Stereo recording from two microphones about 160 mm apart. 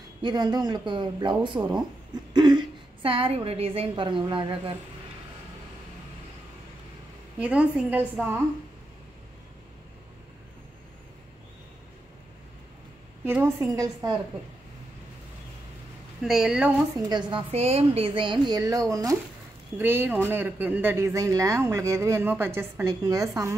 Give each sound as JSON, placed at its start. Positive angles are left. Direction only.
{"t": 0.2, "sound": "a woman's voice", "side_deg": -25}
{"t": 7.3, "sound": "speech", "side_deg": -5}
{"t": 13.2, "sound": "speech", "side_deg": -10}
{"t": 16.2, "sound": "a woman's voice", "side_deg": -5}
{"t": 17.1, "sound": "a woman's voice", "side_deg": -30}